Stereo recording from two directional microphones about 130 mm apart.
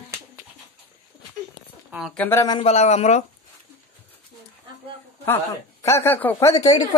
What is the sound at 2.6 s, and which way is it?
Speech, 60° left (ahead or behind).